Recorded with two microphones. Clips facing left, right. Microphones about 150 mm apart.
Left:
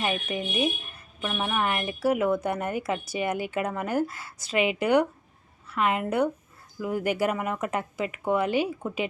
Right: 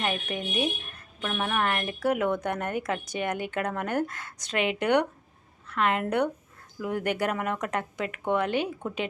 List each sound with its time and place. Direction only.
0.0 s a woman's voice: 5° left (ahead or behind)